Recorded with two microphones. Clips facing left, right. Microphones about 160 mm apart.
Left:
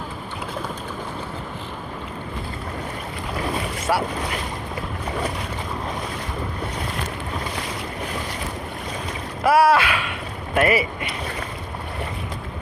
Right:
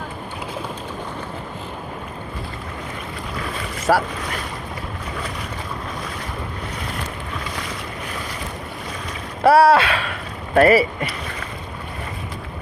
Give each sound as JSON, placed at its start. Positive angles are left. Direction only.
{"t": 3.9, "sound": "speech", "side_deg": -45}
{"t": 9.4, "sound": "speech", "side_deg": -30}